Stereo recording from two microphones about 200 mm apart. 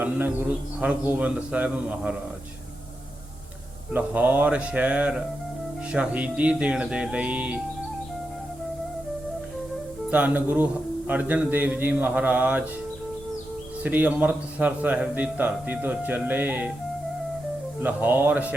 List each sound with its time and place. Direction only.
0.0 s a man's voice: 10° right (ahead or behind)
3.9 s a man's voice: 10° right (ahead or behind)
5.9 s music: 5° right (ahead or behind)
10.1 s a man's voice: 10° right (ahead or behind)
13.8 s a man's voice: 10° right (ahead or behind)
17.7 s a man's voice: 10° right (ahead or behind)